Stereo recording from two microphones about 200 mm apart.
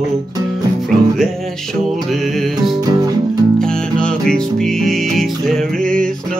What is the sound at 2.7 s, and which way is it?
Music, 20° right (ahead or behind).